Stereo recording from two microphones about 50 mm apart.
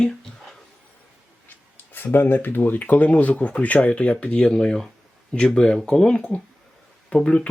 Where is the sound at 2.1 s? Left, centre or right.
Left.